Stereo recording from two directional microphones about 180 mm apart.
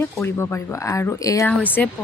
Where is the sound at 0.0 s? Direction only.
15° left (ahead or behind).